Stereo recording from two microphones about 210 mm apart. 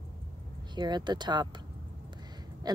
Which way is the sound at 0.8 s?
20° right (ahead or behind).